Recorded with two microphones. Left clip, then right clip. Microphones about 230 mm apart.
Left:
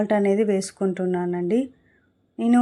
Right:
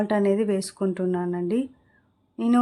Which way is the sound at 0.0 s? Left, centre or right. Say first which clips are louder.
Left 2 dB; centre.